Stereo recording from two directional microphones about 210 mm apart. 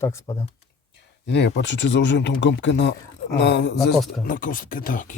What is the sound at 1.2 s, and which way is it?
Speech, 55° left (ahead or behind).